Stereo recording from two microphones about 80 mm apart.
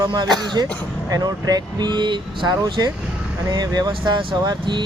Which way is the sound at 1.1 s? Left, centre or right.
Right.